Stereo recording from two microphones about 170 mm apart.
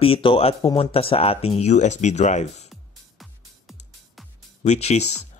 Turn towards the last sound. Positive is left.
turn(degrees=40)  # may be behind; listen again after turning